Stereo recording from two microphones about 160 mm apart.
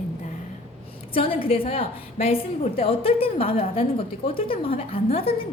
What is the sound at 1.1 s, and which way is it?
A woman's voice, 35° left (ahead or behind).